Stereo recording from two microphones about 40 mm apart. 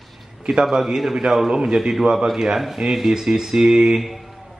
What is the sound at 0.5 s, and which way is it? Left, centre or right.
Speech, centre.